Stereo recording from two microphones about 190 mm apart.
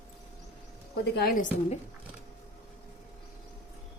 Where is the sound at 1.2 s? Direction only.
50° left (ahead or behind).